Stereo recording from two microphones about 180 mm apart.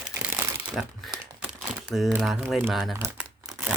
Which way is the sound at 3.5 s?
10° right (ahead or behind).